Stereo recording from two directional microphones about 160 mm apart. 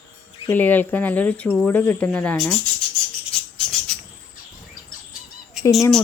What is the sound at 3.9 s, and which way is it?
Cricket, 5° left (ahead or behind).